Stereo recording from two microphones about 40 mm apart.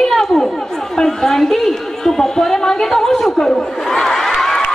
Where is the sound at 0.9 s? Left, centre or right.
Centre.